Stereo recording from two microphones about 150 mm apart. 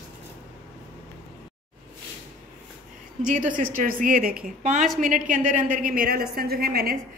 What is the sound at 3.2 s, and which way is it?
Speech, 55° right (ahead or behind).